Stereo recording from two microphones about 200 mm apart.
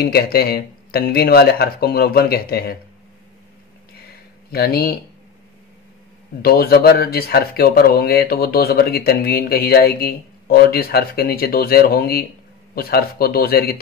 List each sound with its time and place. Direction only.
0.0 s speech: 50° left (ahead or behind)
4.5 s speech: 50° left (ahead or behind)
6.4 s speech: 50° left (ahead or behind)